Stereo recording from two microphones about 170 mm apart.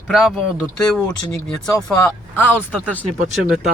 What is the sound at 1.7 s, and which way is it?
Speech, 15° left (ahead or behind).